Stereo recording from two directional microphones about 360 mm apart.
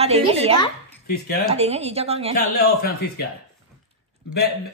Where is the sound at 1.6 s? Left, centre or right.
Centre.